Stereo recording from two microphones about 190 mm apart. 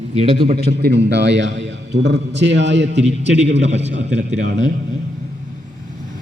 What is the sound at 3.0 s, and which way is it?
A man's voice, 35° right (ahead or behind).